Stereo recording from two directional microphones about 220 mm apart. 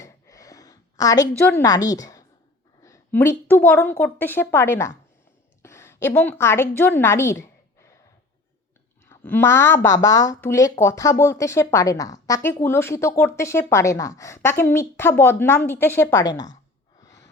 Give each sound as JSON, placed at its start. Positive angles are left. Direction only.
{"t": 0.0, "sound": "a sound", "side_deg": 15}
{"t": 1.5, "sound": "a woman's voice", "side_deg": 15}
{"t": 9.0, "sound": "a woman's voice", "side_deg": 10}
{"t": 17.0, "sound": "gasp", "side_deg": 15}